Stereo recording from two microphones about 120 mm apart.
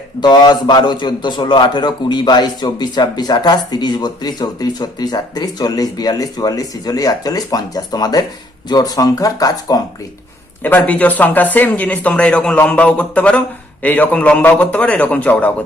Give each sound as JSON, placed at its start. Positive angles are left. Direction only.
{"t": 0.2, "sound": "a man's voice", "side_deg": 35}
{"t": 10.6, "sound": "speech", "side_deg": 15}